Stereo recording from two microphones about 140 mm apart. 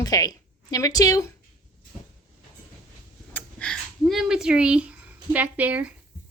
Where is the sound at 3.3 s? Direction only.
5° left (ahead or behind).